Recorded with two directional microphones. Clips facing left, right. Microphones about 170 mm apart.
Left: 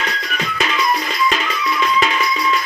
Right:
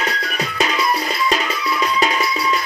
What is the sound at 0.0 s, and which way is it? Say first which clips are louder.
Music: right 1 dB; 35° right (ahead or behind).